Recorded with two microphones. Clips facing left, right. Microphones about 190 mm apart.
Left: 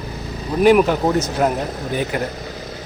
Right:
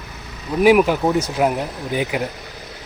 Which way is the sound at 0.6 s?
5° right (ahead or behind).